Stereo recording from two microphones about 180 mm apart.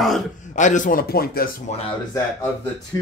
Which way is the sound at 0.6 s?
45° left (ahead or behind).